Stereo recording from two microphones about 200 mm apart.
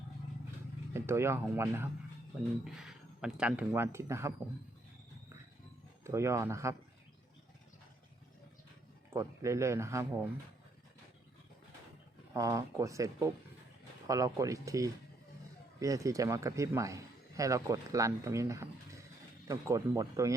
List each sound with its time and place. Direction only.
0.9 s speech: 10° right (ahead or behind)
6.1 s speech: 15° right (ahead or behind)
9.0 s speech: 15° right (ahead or behind)
12.3 s speech: 15° right (ahead or behind)